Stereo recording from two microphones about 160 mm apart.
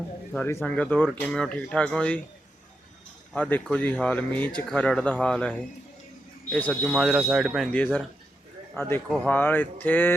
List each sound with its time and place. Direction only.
0.3 s speech: 10° left (ahead or behind)
3.3 s speech: 10° left (ahead or behind)